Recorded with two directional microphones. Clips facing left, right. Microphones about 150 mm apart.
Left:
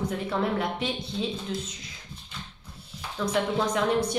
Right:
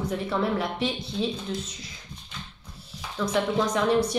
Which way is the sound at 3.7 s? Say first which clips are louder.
Right 2 dB; 30° right (ahead or behind).